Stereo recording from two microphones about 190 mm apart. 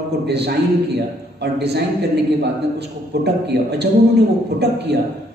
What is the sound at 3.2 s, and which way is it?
Speech, 60° right (ahead or behind).